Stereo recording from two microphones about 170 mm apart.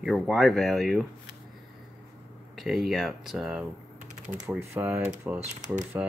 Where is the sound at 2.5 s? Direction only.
Centre (ahead or behind).